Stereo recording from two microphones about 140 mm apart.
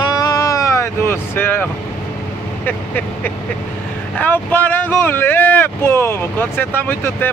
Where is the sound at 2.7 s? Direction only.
15° left (ahead or behind).